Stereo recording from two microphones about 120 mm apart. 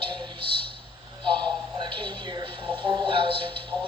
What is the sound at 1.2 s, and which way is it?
Television, 40° right (ahead or behind).